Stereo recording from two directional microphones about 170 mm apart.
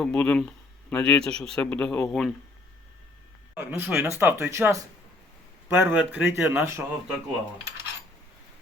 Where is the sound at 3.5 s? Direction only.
10° right (ahead or behind).